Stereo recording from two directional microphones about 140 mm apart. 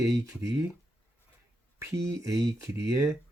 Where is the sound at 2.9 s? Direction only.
20° right (ahead or behind).